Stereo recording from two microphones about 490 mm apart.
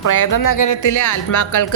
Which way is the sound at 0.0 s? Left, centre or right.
Left.